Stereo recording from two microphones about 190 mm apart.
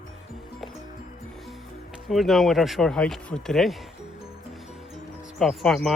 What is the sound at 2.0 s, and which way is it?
Speech, centre (ahead or behind).